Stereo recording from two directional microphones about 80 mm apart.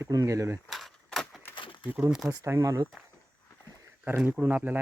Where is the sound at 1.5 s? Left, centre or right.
Left.